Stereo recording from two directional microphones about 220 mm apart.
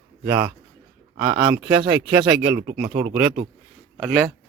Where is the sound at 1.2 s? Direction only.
20° right (ahead or behind).